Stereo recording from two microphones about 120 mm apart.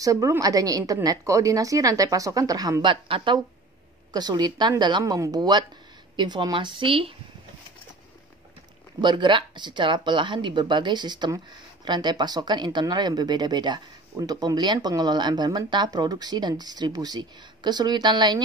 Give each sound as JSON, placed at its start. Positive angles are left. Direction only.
{"t": 0.0, "sound": "speech", "side_deg": -30}
{"t": 2.9, "sound": "speech", "side_deg": -45}
{"t": 9.0, "sound": "speech", "side_deg": -40}